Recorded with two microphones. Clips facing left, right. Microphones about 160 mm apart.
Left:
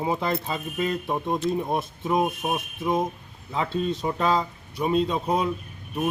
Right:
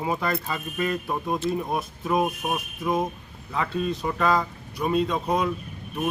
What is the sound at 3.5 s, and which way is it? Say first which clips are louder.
Speech: left 1 dB; 25° left (ahead or behind).